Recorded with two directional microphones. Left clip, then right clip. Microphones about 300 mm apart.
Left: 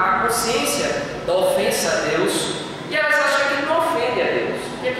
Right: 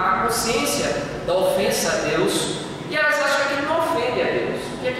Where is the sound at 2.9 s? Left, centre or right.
Centre.